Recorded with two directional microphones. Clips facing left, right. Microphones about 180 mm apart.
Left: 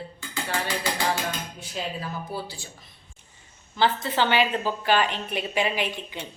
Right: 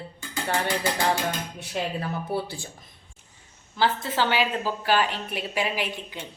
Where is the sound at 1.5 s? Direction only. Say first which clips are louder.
Right 3 dB; 60° right (ahead or behind).